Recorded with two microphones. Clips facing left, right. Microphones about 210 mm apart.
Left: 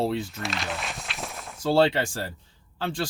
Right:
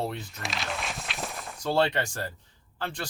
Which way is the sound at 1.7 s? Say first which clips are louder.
Left 4 dB; 25° left (ahead or behind).